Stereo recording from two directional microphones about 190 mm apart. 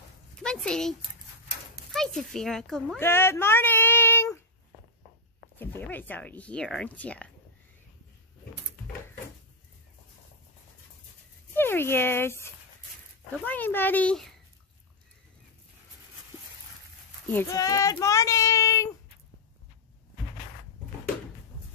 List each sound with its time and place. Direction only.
0.4 s speech: 5° left (ahead or behind)
3.0 s a sound: 10° left (ahead or behind)
5.6 s speech: 10° left (ahead or behind)
11.5 s speech: 10° left (ahead or behind)
17.3 s speech: 15° left (ahead or behind)